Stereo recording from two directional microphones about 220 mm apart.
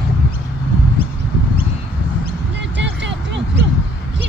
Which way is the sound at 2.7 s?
55° right (ahead or behind).